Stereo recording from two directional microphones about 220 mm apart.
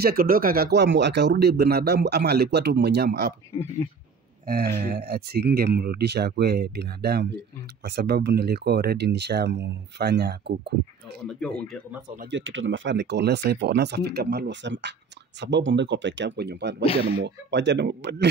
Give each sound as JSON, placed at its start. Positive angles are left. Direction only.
{"t": 0.0, "sound": "speech", "side_deg": -40}
{"t": 4.7, "sound": "speech", "side_deg": -45}
{"t": 11.2, "sound": "speech", "side_deg": 0}
{"t": 12.2, "sound": "speech", "side_deg": -55}